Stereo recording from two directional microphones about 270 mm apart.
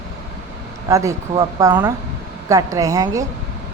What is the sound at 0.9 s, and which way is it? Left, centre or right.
A woman's voice, centre.